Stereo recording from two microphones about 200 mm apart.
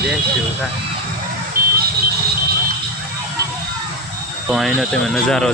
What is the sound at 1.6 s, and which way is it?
Vehicle, 45° right (ahead or behind).